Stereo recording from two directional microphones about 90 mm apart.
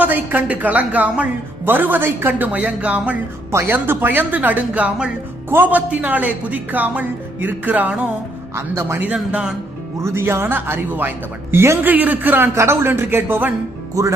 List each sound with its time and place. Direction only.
0.0 s a woman's voice: 20° right (ahead or behind)
8.5 s a woman's voice: 30° right (ahead or behind); by 9.6 s 10° right (ahead or behind)
10.0 s a woman's voice: 30° right (ahead or behind)